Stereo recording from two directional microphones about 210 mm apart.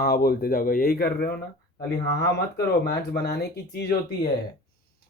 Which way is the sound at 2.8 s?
50° left (ahead or behind).